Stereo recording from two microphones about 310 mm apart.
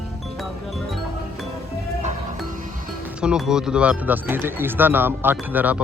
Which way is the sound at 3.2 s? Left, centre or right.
Centre.